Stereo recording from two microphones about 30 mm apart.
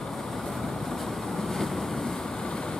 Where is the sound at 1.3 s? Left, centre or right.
Centre.